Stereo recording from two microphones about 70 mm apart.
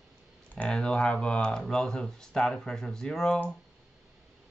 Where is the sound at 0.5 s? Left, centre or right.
Centre.